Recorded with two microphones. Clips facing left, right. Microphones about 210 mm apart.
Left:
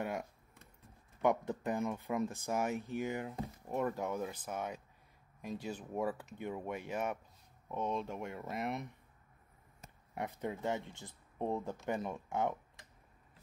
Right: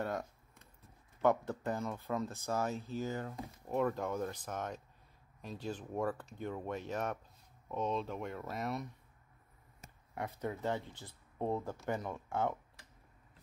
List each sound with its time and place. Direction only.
0.0 s a sound: 10° left (ahead or behind)
1.2 s speech: 15° left (ahead or behind)
10.1 s speech: 20° left (ahead or behind)